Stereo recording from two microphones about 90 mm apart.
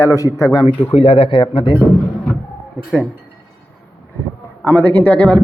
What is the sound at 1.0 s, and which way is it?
Speech, 90° left.